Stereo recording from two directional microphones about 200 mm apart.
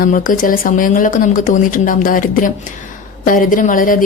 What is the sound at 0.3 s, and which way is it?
Speech, 45° left (ahead or behind).